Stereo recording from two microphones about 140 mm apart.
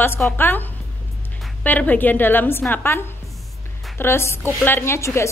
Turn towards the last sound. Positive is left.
turn(degrees=20)  # may be behind; listen again after turning